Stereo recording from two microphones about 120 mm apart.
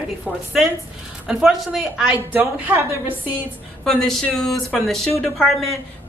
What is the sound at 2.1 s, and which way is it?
A woman's voice, 15° right (ahead or behind).